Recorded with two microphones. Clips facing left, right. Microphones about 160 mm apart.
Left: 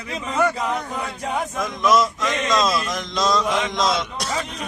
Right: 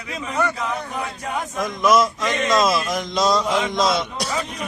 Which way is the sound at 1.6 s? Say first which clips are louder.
Right 2 dB; centre (ahead or behind).